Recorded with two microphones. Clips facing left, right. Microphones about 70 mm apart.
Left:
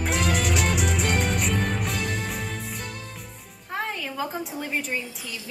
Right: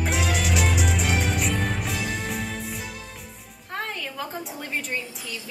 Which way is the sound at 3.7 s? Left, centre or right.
Centre.